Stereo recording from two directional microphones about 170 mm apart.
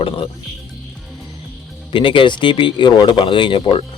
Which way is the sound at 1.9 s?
30° left (ahead or behind).